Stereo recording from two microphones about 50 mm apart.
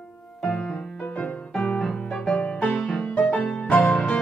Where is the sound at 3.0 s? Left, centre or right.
Left.